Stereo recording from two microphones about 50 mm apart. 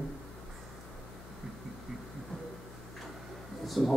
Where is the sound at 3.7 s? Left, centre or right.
Centre.